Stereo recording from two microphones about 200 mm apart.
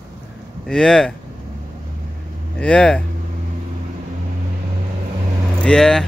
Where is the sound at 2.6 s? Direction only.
5° left (ahead or behind).